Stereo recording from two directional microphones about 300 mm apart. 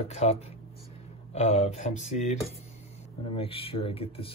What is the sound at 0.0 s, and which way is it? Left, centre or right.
Speech, left.